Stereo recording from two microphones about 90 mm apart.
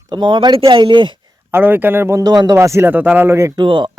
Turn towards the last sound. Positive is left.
turn(degrees=-65)  # may be behind; listen again after turning